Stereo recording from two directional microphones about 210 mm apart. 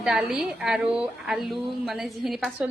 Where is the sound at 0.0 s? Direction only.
5° right (ahead or behind).